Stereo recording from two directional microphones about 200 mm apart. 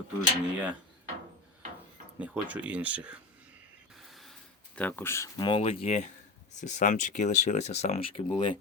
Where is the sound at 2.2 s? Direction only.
5° right (ahead or behind).